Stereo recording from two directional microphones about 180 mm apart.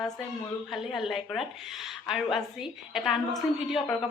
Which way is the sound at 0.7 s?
Centre (ahead or behind).